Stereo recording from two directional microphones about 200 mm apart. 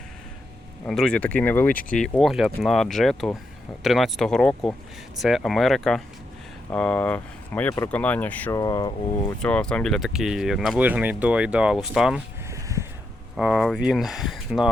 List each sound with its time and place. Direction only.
0.9 s speech: centre (ahead or behind)
8.5 s speech: 20° left (ahead or behind)
9.4 s speech: 5° left (ahead or behind)
12.5 s a sound: 15° right (ahead or behind)
13.3 s speech: centre (ahead or behind)